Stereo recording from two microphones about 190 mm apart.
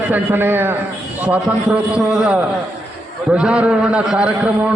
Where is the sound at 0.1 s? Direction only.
10° right (ahead or behind).